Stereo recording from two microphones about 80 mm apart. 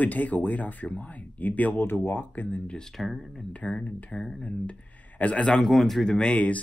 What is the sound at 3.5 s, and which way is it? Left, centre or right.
Speech, centre.